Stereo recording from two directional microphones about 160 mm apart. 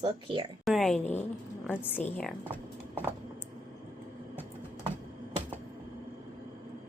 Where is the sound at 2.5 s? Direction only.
10° right (ahead or behind).